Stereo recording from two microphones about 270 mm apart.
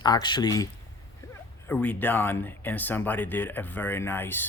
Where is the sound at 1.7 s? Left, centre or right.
Centre.